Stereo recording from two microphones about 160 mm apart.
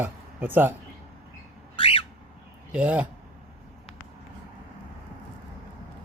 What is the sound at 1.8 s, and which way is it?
Squawk, 35° left (ahead or behind).